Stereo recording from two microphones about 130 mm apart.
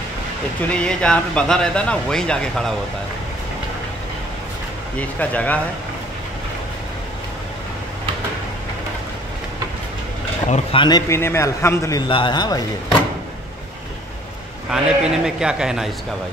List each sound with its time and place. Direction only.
0.6 s speech: 10° left (ahead or behind)
4.9 s speech: 10° left (ahead or behind)
10.7 s speech: 35° left (ahead or behind)
11.1 s a man's voice: 20° left (ahead or behind)
12.1 s speech: 35° left (ahead or behind)
14.7 s a man's voice: 5° right (ahead or behind)